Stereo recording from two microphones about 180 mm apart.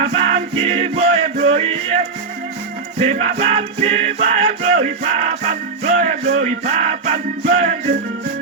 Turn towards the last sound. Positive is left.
turn(degrees=-40)  # may be behind; listen again after turning